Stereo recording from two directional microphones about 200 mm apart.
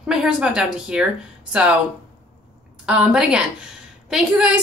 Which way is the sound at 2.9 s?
5° right (ahead or behind).